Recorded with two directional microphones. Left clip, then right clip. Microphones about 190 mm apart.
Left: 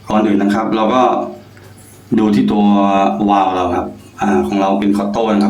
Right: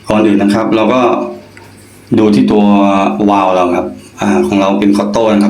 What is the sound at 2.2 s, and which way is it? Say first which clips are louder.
A man's voice: right 5 dB; 25° right (ahead or behind).